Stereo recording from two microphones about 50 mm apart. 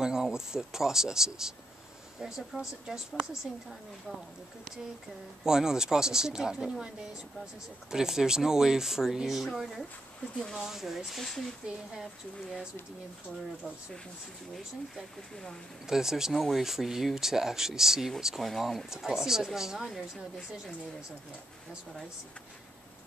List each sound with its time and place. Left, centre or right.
0.0 s speech: centre
5.4 s speech: centre
7.9 s speech: centre
11.6 s speech: centre
14.5 s speech: centre
16.3 s speech: centre
16.6 s speech: centre